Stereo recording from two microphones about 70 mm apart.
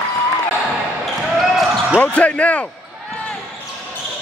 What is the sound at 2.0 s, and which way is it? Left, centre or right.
Speech, centre.